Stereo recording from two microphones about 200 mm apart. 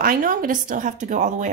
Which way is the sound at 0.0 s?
45° right (ahead or behind).